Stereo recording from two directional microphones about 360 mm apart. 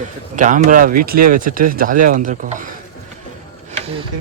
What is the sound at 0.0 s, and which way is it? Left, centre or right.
Speech, right.